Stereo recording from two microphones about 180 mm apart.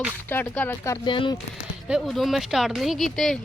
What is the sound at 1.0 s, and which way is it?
Speech, 30° left (ahead or behind).